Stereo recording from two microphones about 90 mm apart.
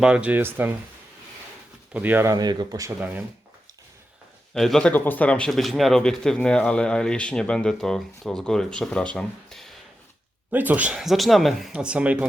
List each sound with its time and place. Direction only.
0.0 s speech: 10° right (ahead or behind)
1.9 s speech: 20° right (ahead or behind)
2.2 s speech: 45° right (ahead or behind)
3.0 s speech: 20° right (ahead or behind)
4.5 s speech: 5° left (ahead or behind)
4.9 s speech: 20° left (ahead or behind)
5.5 s speech: centre (ahead or behind)
10.5 s speech: 20° right (ahead or behind)
11.0 s speech: centre (ahead or behind)